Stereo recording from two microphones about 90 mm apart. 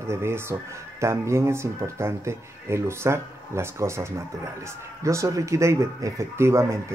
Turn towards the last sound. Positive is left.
turn(degrees=-30)  # may be behind; listen again after turning